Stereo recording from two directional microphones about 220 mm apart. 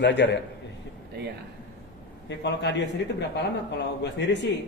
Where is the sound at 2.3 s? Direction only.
50° left (ahead or behind).